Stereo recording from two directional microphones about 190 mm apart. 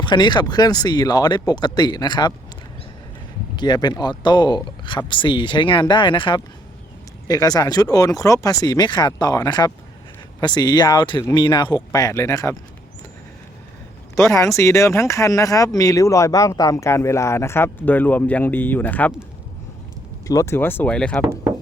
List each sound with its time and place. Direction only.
0.0 s speech: 25° left (ahead or behind)
3.5 s speech: 25° left (ahead or behind)
14.2 s speech: 15° left (ahead or behind)
20.2 s speech: 15° left (ahead or behind)